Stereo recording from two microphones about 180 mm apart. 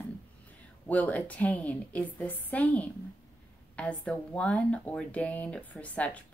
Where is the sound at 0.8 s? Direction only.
10° left (ahead or behind).